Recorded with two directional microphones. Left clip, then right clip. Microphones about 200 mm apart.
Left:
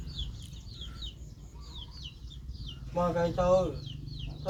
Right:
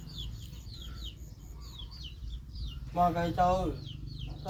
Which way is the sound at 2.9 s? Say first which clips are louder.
Right 1 dB; 45° right (ahead or behind).